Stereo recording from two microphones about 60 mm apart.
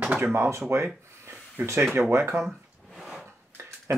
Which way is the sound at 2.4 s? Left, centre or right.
Centre.